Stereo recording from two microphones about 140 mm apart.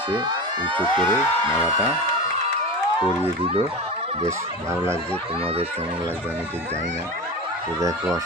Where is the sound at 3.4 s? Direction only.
40° right (ahead or behind).